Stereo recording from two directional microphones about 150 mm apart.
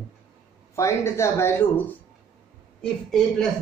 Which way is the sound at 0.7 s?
20° left (ahead or behind).